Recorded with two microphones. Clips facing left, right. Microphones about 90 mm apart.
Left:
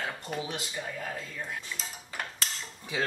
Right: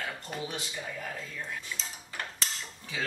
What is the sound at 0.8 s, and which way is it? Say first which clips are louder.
Dishes: left 2 dB; centre (ahead or behind).